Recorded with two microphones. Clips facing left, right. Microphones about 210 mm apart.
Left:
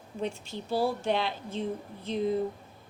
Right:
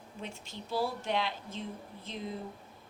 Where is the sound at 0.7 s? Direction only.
35° left (ahead or behind).